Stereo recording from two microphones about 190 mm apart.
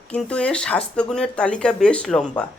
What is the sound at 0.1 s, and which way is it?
Speech, 5° left (ahead or behind).